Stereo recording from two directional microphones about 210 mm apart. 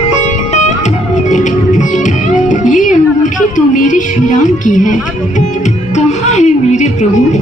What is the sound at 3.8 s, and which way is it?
Speech, 35° left (ahead or behind).